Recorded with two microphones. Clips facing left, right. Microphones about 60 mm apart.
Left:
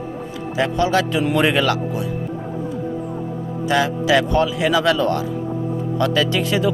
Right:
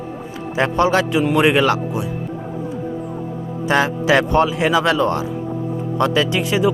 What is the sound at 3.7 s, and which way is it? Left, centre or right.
Speech, right.